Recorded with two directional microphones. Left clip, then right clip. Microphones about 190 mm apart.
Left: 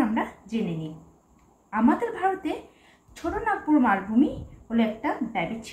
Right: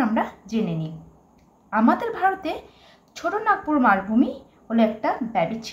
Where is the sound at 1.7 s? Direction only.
65° right (ahead or behind).